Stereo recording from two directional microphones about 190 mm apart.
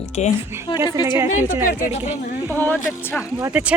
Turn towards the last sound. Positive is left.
turn(degrees=-10)  # may be behind; listen again after turning